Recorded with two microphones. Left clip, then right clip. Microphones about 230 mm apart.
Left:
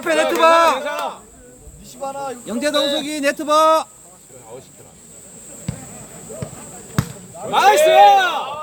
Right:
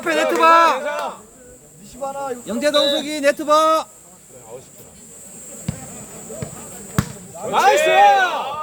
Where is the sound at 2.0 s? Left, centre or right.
Left.